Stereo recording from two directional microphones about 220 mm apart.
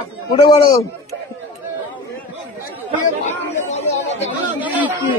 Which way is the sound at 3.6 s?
30° left (ahead or behind).